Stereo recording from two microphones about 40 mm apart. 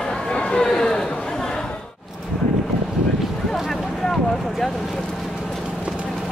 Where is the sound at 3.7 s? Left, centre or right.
Centre.